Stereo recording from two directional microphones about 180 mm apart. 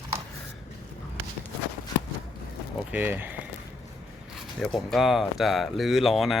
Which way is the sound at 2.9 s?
10° right (ahead or behind).